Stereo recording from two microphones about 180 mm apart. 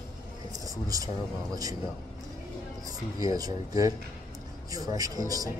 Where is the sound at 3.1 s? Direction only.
20° right (ahead or behind).